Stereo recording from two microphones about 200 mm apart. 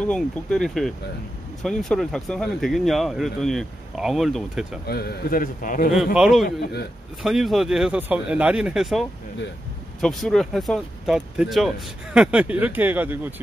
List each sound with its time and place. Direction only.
0.0 s speech: 5° left (ahead or behind)
4.8 s a man's voice: 50° left (ahead or behind)
6.1 s speech: centre (ahead or behind)
6.4 s a man's voice: 55° left (ahead or behind)
7.2 s speech: centre (ahead or behind)
10.0 s speech: centre (ahead or behind)